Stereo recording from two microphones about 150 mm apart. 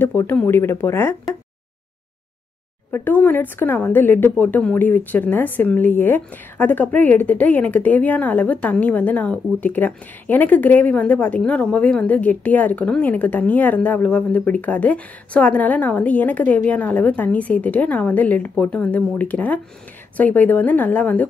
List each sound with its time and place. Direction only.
0.0 s a woman's voice: 15° left (ahead or behind)
2.9 s a woman's voice: 10° left (ahead or behind)